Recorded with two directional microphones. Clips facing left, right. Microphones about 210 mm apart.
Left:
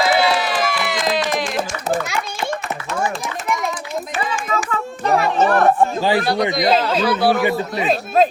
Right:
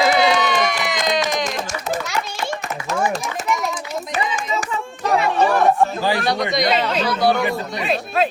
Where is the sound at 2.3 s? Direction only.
40° right (ahead or behind).